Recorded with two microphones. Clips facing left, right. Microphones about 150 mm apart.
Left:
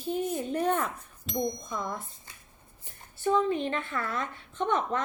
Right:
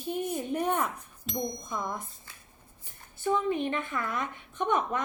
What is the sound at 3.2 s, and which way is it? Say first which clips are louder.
A woman's voice: left 2 dB; 15° right (ahead or behind).